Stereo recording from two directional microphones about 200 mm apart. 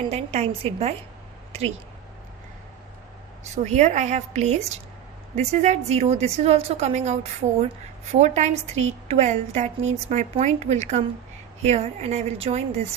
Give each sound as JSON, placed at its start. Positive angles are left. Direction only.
{"t": 0.1, "sound": "a woman's voice", "side_deg": -30}
{"t": 3.4, "sound": "a woman's voice", "side_deg": -35}